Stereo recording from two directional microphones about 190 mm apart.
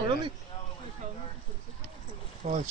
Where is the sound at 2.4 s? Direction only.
40° right (ahead or behind).